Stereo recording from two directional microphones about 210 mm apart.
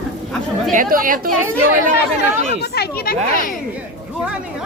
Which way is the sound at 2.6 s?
50° left (ahead or behind).